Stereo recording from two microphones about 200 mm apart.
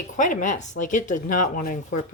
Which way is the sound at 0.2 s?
40° left (ahead or behind).